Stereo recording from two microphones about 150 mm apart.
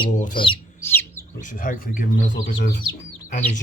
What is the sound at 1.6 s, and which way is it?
Speech, 60° left (ahead or behind).